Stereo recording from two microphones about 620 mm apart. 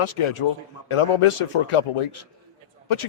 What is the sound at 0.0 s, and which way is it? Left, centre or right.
A man's voice, left.